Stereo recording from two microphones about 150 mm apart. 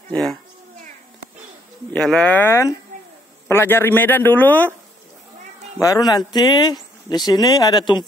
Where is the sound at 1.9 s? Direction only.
5° left (ahead or behind).